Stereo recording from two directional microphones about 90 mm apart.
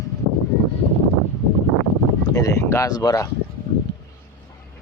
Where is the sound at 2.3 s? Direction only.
35° left (ahead or behind).